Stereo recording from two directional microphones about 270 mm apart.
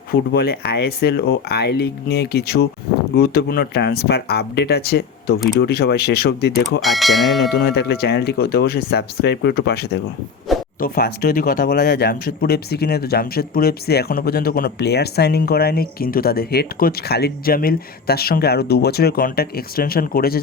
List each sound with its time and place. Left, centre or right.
0.1 s speech: left
6.8 s speech: centre
7.5 s speech: left